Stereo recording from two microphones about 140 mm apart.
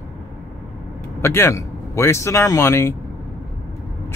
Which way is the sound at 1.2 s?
20° left (ahead or behind).